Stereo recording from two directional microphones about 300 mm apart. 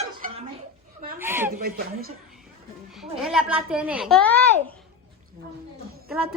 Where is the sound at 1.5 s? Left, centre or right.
Right.